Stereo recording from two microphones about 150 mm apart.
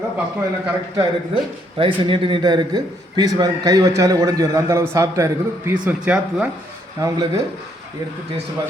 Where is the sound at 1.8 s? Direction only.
35° right (ahead or behind).